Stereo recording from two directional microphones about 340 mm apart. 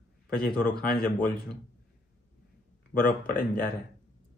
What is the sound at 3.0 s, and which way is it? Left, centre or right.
Speech, left.